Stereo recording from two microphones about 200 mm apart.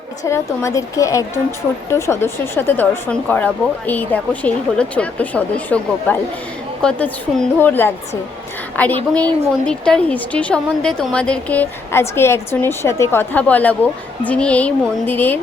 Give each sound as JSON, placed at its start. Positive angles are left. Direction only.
{"t": 0.3, "sound": "speech", "side_deg": 15}